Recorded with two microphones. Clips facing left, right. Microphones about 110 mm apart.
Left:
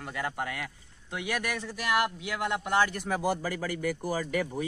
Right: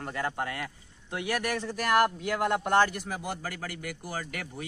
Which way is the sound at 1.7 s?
45° right (ahead or behind).